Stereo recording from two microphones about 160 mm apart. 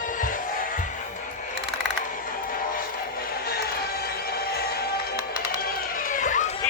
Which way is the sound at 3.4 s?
75° left (ahead or behind).